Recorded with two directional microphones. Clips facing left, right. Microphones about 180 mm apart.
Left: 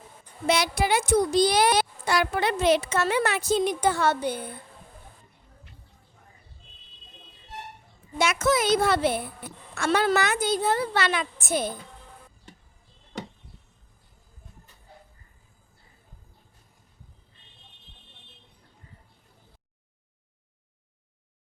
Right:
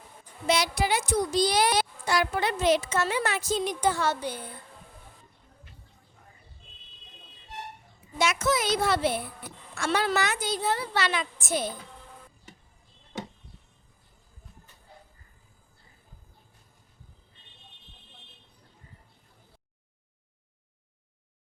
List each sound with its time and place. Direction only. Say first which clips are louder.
0.4 s a child's voice: left 2 dB; 55° left (ahead or behind)
8.2 s a woman's voice: left 3 dB; 55° left (ahead or behind)